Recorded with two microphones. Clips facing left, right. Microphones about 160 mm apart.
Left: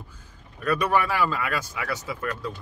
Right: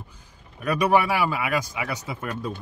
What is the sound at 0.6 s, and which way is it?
Speech, 15° right (ahead or behind).